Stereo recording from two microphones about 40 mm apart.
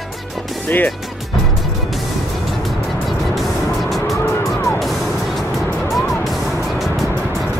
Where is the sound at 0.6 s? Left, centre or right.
Left.